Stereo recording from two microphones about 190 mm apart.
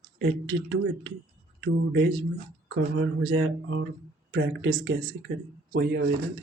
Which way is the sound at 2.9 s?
75° right (ahead or behind).